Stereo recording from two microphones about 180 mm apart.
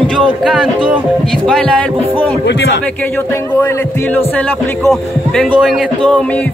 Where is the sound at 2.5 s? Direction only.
75° left (ahead or behind).